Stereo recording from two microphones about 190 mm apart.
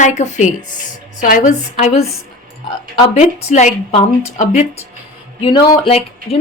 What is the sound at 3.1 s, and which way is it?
Speech, 35° left (ahead or behind).